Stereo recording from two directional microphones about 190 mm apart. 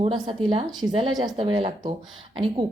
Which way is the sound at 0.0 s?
30° right (ahead or behind).